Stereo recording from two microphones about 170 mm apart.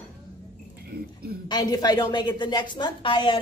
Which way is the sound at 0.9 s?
65° right (ahead or behind).